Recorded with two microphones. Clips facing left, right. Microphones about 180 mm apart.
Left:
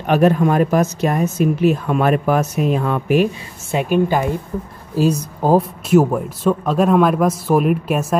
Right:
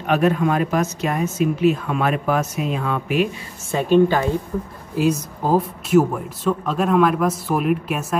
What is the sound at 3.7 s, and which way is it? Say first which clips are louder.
Speech: right 1 dB; 10° left (ahead or behind).